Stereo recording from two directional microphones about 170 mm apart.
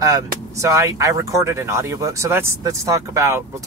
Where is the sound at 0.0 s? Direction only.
20° right (ahead or behind).